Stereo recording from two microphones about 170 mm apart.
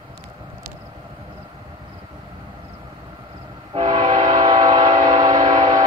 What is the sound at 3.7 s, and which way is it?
Train, 25° right (ahead or behind).